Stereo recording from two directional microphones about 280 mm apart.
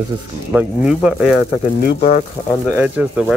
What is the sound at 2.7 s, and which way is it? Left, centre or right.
Speech, centre.